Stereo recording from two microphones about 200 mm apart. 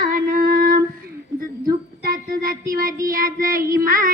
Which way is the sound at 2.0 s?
50° right (ahead or behind).